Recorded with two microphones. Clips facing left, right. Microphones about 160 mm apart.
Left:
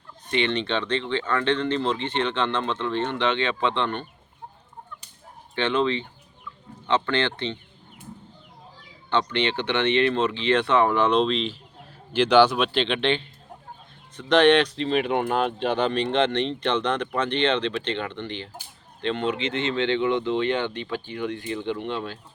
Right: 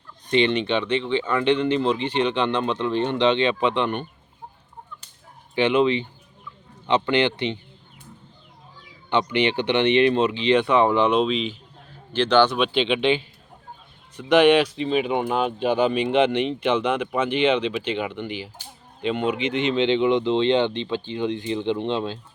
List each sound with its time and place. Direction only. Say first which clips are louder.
0.3 s speech: right 4 dB; 20° right (ahead or behind)
5.5 s speech: right 4 dB; 15° right (ahead or behind)
9.0 s speech: right 3 dB; 15° right (ahead or behind)
11.1 s speech: right 1 dB; 5° right (ahead or behind)
12.1 s speech: left 1 dB; 10° left (ahead or behind); by 22.2 s 20° right (ahead or behind)